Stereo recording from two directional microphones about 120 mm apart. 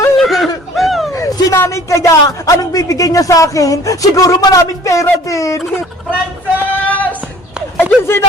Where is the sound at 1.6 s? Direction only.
25° left (ahead or behind).